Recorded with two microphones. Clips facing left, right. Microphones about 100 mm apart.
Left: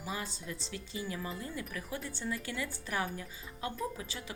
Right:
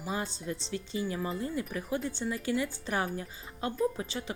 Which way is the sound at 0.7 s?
25° right (ahead or behind).